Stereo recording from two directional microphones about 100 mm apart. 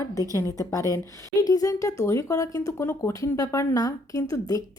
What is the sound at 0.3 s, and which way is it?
Speech, 30° left (ahead or behind).